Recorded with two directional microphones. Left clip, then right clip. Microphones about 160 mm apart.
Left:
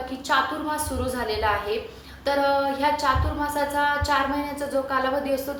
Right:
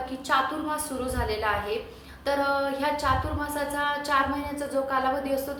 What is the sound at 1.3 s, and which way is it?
Music, 5° right (ahead or behind).